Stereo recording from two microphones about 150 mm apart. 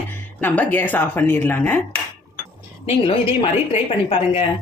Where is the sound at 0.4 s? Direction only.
10° left (ahead or behind).